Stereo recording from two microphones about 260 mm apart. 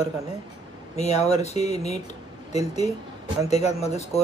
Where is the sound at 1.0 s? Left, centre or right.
Left.